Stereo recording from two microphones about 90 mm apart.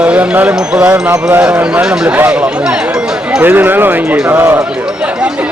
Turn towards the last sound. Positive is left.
turn(degrees=-25)  # may be behind; listen again after turning